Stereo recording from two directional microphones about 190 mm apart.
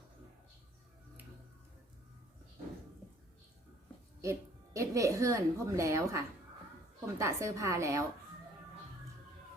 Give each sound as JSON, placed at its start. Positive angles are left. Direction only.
{"t": 4.2, "sound": "a woman's voice", "side_deg": -15}